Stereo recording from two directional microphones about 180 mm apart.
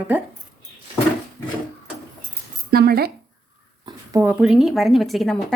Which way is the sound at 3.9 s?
15° right (ahead or behind).